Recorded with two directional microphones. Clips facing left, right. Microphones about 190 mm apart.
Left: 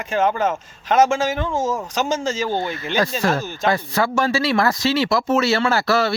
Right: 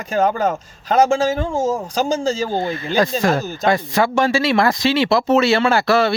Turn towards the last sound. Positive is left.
turn(degrees=-20)  # may be behind; listen again after turning